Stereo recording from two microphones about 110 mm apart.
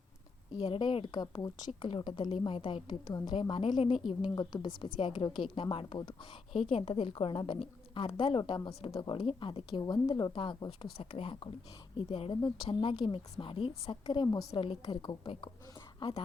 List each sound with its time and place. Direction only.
0.6 s a woman's voice: 50° left (ahead or behind)
3.1 s a woman's voice: 40° left (ahead or behind)